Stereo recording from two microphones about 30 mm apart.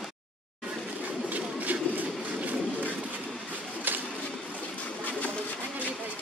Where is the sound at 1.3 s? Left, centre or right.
Right.